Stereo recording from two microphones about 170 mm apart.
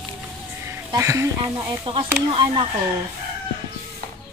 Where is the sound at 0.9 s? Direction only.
15° right (ahead or behind).